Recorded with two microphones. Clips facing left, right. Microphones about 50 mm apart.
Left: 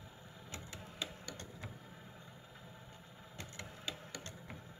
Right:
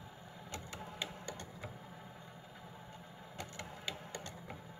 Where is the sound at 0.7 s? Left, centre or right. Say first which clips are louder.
Right 1 dB; right.